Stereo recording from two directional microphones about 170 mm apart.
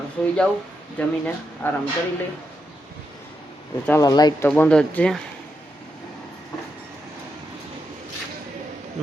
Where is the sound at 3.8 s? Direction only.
20° left (ahead or behind).